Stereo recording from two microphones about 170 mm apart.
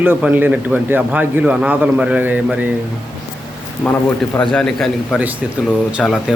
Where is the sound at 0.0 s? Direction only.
10° right (ahead or behind).